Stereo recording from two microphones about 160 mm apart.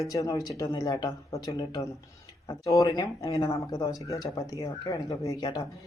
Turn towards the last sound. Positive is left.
turn(degrees=25)  # may be behind; listen again after turning